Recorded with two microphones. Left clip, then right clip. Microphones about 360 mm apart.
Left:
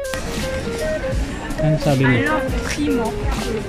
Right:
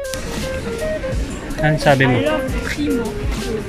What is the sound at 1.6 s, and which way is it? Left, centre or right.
Speech, right.